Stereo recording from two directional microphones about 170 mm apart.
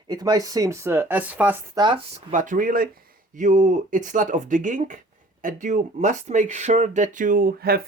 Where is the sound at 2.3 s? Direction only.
50° right (ahead or behind).